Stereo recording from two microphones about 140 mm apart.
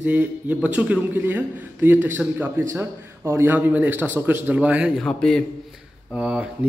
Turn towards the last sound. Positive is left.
turn(degrees=-5)  # may be behind; listen again after turning